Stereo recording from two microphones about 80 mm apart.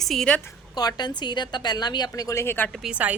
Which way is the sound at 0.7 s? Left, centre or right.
Left.